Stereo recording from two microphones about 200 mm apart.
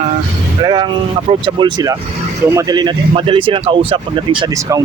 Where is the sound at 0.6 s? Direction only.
20° right (ahead or behind).